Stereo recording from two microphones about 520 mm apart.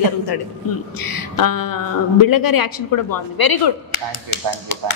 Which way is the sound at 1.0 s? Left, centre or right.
Left.